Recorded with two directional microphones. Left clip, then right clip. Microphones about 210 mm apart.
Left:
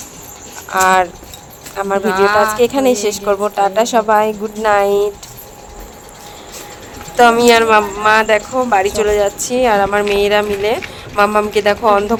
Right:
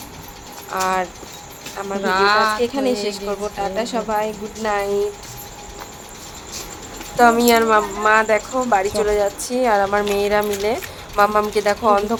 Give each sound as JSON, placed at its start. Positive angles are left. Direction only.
{"t": 0.7, "sound": "a woman's voice", "side_deg": 35}
{"t": 2.0, "sound": "speech", "side_deg": 0}
{"t": 2.6, "sound": "a woman's voice", "side_deg": 35}
{"t": 7.2, "sound": "speech", "side_deg": 20}